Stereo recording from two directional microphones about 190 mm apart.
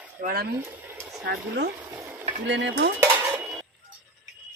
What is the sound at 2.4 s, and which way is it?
Dishes, 70° right (ahead or behind).